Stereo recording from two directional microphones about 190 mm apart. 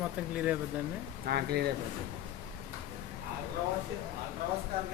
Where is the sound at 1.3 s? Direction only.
55° right (ahead or behind).